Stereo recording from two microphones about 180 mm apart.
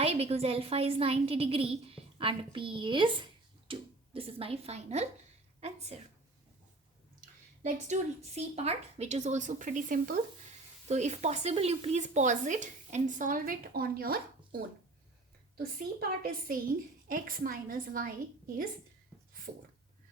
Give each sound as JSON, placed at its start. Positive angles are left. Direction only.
{"t": 0.0, "sound": "a woman's voice", "side_deg": -35}
{"t": 7.6, "sound": "a woman's voice", "side_deg": -40}